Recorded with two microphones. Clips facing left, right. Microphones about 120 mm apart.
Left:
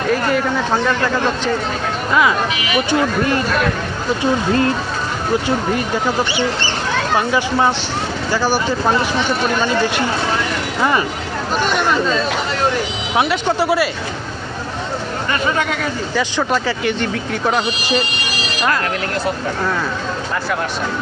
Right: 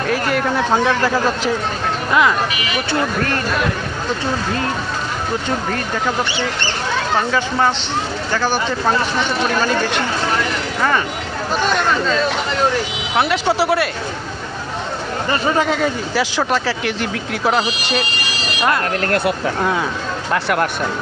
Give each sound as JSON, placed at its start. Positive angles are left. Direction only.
{"t": 0.1, "sound": "speech", "side_deg": -5}
{"t": 3.0, "sound": "speech", "side_deg": 15}
{"t": 7.2, "sound": "speech", "side_deg": 10}
{"t": 10.8, "sound": "speech", "side_deg": 10}
{"t": 13.1, "sound": "speech", "side_deg": 0}
{"t": 15.3, "sound": "speech", "side_deg": -30}
{"t": 16.1, "sound": "speech", "side_deg": 0}
{"t": 20.3, "sound": "speech", "side_deg": -70}